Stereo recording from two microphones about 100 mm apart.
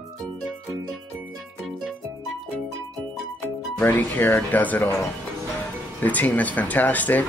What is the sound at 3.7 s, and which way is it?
Speech, 20° left (ahead or behind).